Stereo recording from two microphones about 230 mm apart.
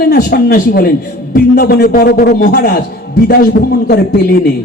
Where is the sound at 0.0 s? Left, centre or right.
Left.